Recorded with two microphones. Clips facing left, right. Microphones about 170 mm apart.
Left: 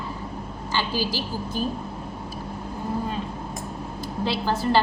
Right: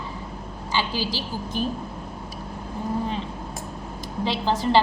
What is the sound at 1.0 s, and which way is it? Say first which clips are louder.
Speech: left 1 dB; 15° left (ahead or behind).